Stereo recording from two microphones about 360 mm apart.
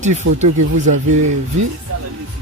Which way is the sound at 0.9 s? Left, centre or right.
Right.